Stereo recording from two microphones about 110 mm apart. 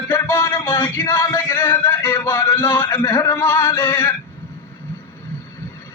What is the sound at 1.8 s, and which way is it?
Speech, 25° left (ahead or behind).